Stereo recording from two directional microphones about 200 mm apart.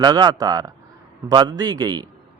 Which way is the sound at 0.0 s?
20° right (ahead or behind).